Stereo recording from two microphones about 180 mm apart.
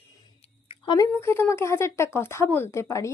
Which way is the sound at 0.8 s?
20° left (ahead or behind).